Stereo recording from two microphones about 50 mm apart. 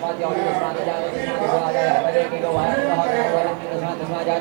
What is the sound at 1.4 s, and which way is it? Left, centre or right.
A man's voice, left.